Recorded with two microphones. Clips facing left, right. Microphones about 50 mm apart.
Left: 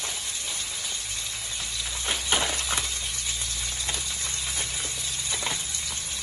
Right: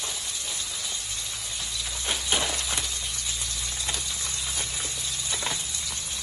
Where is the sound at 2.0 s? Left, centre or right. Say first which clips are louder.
Left 1 dB; left.